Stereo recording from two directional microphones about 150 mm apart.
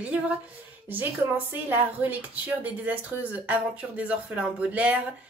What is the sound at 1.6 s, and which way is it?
Speech, 15° right (ahead or behind).